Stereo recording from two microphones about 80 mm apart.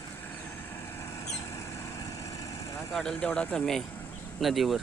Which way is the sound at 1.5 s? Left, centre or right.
Left.